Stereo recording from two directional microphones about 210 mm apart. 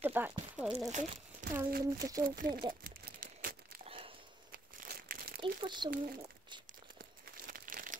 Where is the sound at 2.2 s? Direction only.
40° right (ahead or behind).